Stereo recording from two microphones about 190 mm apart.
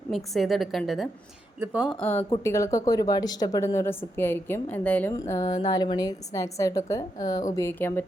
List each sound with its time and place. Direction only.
0.3 s a woman's voice: centre (ahead or behind)
2.0 s speech: 10° left (ahead or behind)